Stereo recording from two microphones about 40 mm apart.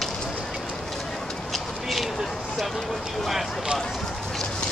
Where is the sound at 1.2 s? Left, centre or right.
Centre.